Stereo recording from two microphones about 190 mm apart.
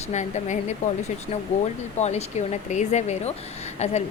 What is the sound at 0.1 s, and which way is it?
A woman's voice, 40° left (ahead or behind).